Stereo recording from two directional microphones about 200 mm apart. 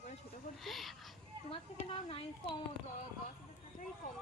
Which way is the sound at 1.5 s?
30° left (ahead or behind).